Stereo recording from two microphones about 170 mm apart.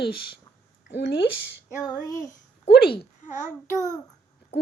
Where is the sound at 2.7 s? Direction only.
65° left (ahead or behind).